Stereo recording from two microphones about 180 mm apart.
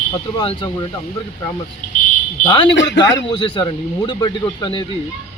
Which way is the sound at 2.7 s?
85° left.